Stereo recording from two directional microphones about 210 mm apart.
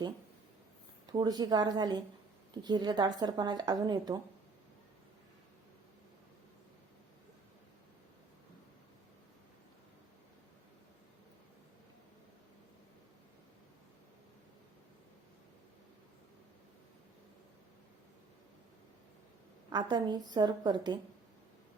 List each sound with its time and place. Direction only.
1.0 s speech: 20° right (ahead or behind)
19.7 s speech: 20° right (ahead or behind)